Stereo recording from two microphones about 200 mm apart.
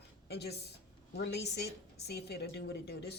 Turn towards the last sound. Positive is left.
turn(degrees=55)  # may be behind; listen again after turning